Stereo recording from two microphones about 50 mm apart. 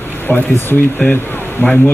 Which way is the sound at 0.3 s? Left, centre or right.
Left.